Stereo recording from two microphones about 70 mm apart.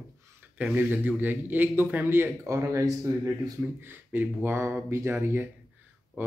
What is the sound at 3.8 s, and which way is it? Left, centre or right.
A man's voice, right.